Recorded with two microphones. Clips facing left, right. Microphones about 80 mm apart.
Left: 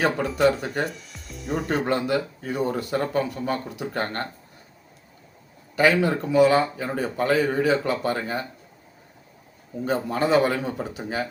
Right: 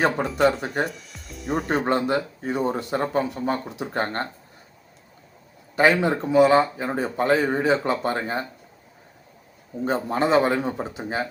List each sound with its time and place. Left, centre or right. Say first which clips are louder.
0.3 s speech: even; centre
1.8 s speech: right 1 dB; right
5.7 s speech: right 1 dB; right
9.8 s speech: right 1 dB; right